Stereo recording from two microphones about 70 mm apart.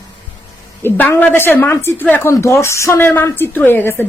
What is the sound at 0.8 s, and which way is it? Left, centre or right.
A woman's voice, left.